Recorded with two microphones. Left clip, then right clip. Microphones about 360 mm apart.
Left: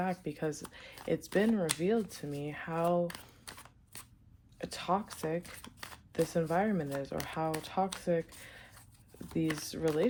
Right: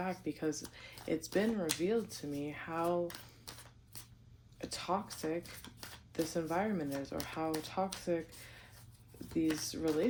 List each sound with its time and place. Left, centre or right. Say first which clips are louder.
0.0 s speech: left 2 dB; left
4.5 s speech: left 4 dB; left